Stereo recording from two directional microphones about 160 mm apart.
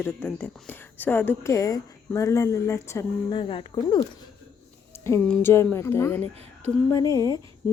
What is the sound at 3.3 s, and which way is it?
Speech, 35° left (ahead or behind).